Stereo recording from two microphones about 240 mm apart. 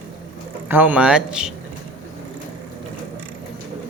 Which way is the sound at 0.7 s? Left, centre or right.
Centre.